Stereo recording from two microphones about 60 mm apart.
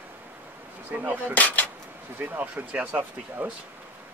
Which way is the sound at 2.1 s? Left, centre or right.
Right.